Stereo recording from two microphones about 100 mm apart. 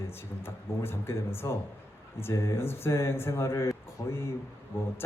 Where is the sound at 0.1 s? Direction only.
25° left (ahead or behind).